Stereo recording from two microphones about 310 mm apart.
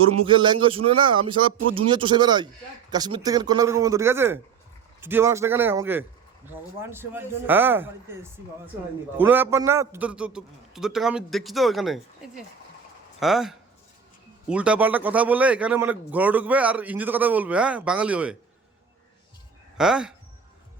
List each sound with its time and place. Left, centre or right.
0.3 s a man's voice: centre
13.1 s a man's voice: centre
19.7 s speech: centre